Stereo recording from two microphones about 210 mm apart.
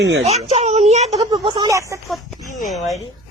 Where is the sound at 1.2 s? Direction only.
20° right (ahead or behind).